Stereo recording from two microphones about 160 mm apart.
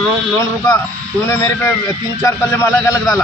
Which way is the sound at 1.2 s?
15° left (ahead or behind).